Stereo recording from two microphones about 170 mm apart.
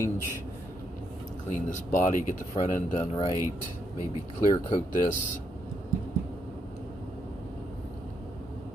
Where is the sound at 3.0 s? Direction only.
25° left (ahead or behind).